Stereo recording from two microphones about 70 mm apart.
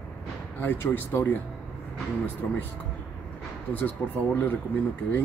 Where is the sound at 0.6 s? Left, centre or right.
Left.